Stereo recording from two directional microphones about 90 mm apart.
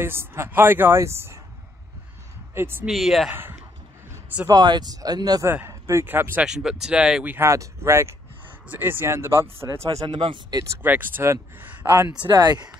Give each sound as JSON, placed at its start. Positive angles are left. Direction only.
{"t": 0.0, "sound": "a woman's voice", "side_deg": -25}
{"t": 2.5, "sound": "speech", "side_deg": -25}
{"t": 2.9, "sound": "speech", "side_deg": 0}
{"t": 3.3, "sound": "a woman's voice", "side_deg": -25}
{"t": 4.5, "sound": "speech", "side_deg": -50}
{"t": 5.4, "sound": "a woman's voice", "side_deg": -25}
{"t": 5.7, "sound": "a sound", "side_deg": -30}
{"t": 6.0, "sound": "a woman's voice", "side_deg": -20}
{"t": 6.4, "sound": "speech", "side_deg": -5}
{"t": 7.2, "sound": "a woman's voice", "side_deg": -30}
{"t": 10.0, "sound": "speech", "side_deg": -65}
{"t": 10.8, "sound": "a woman's voice", "side_deg": -20}
{"t": 12.1, "sound": "speech", "side_deg": -50}